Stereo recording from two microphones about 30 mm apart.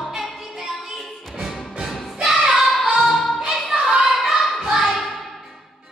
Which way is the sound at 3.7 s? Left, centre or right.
Right.